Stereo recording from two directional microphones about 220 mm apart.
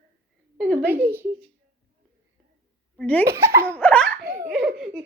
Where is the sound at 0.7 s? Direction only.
10° right (ahead or behind).